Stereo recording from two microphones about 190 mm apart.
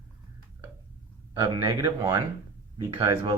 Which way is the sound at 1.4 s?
20° right (ahead or behind).